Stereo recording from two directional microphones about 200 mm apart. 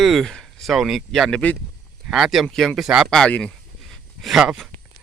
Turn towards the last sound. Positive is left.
turn(degrees=0)  # may be behind; listen again after turning